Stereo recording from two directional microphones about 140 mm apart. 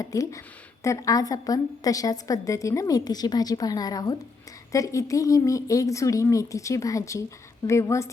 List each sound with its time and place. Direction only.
0.0 s a woman's voice: 25° left (ahead or behind)